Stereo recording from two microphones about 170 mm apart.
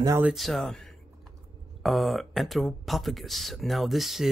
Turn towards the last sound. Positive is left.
turn(degrees=0)  # may be behind; listen again after turning